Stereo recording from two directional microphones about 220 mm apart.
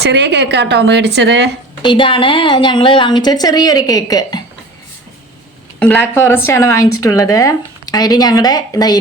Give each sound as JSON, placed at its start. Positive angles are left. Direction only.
{"t": 0.0, "sound": "speech", "side_deg": -50}
{"t": 1.8, "sound": "a woman's voice", "side_deg": 20}
{"t": 5.8, "sound": "speech", "side_deg": 5}